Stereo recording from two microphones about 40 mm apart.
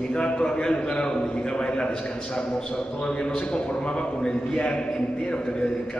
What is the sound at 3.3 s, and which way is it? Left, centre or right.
A man's voice, left.